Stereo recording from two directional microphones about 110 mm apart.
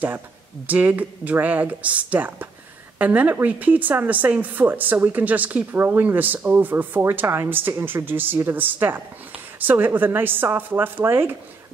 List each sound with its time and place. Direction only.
0.7 s a woman's voice: 15° right (ahead or behind)